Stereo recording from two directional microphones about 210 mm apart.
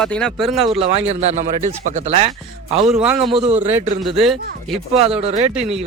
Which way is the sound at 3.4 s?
30° right (ahead or behind).